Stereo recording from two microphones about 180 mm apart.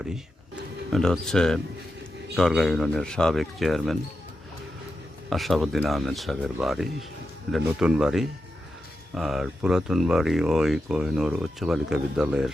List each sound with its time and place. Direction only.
0.9 s speech: centre (ahead or behind)
5.3 s speech: centre (ahead or behind)